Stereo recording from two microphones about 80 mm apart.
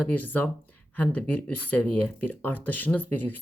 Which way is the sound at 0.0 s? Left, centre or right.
Left.